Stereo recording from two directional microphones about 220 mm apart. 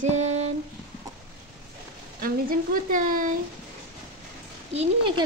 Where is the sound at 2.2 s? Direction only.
40° right (ahead or behind).